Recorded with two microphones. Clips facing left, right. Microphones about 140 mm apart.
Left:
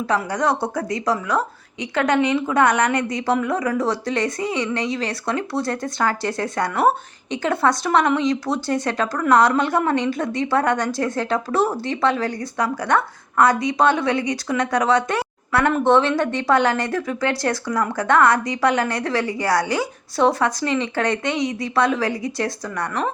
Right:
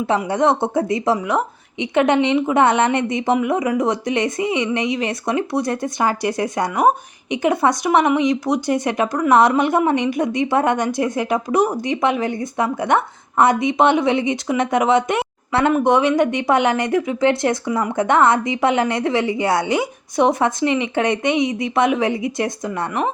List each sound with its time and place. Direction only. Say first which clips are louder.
0.1 s speech: right 4 dB; 25° right (ahead or behind)